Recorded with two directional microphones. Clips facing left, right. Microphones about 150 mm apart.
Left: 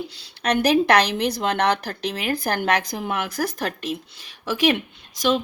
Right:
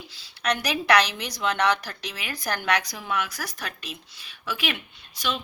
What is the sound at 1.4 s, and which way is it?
A woman's voice, 55° left (ahead or behind).